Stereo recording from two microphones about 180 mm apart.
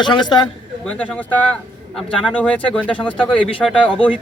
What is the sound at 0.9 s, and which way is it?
Speech, 5° left (ahead or behind).